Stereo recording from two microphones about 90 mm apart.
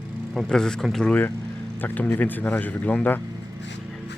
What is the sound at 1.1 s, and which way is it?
Speech, 20° left (ahead or behind).